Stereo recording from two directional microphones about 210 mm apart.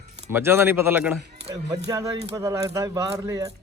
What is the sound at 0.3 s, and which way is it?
A man's voice, 10° right (ahead or behind).